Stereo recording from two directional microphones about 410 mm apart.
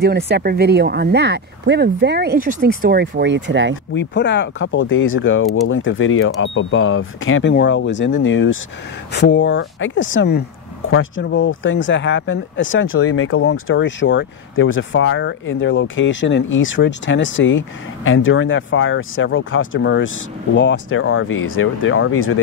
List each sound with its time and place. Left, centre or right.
0.0 s speech: right
3.9 s speech: left